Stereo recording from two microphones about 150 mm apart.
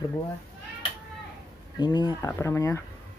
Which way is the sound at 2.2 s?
20° left (ahead or behind).